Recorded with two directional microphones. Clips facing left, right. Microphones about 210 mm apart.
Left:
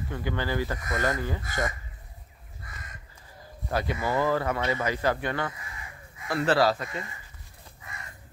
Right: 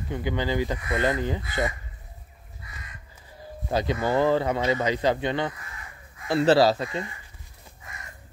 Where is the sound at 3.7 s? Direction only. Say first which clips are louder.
Right 4 dB; 25° right (ahead or behind).